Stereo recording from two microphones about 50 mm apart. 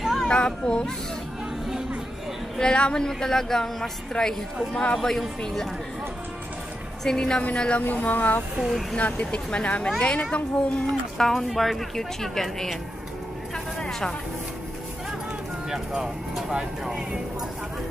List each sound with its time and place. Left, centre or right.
0.0 s a sound: centre
0.3 s speech: centre
2.6 s a woman's voice: centre
7.1 s a woman's voice: centre
7.8 s speech: left
8.5 s speech: centre
8.9 s speech: left
11.1 s speech: centre
13.7 s a sound: centre
15.7 s speech: centre